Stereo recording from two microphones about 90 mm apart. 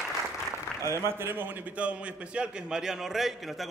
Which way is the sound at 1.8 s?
15° right (ahead or behind).